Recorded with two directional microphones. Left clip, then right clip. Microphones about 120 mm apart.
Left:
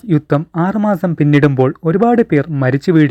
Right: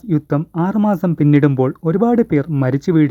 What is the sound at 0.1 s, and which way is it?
Speech, 30° left (ahead or behind).